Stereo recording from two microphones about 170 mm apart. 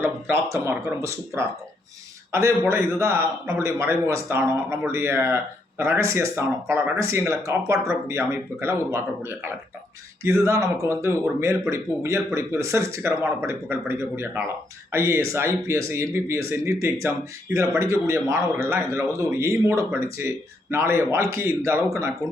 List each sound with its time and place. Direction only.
0.0 s speech: 15° right (ahead or behind)